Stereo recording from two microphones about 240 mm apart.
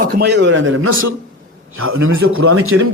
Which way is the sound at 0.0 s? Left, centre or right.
Right.